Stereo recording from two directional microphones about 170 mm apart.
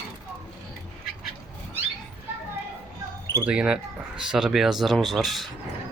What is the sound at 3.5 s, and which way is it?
Speech, 5° right (ahead or behind).